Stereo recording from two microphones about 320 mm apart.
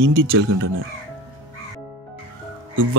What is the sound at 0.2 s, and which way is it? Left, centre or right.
Speech, right.